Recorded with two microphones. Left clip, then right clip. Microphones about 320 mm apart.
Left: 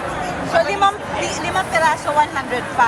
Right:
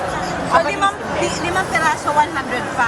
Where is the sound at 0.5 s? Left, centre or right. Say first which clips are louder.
Even; centre.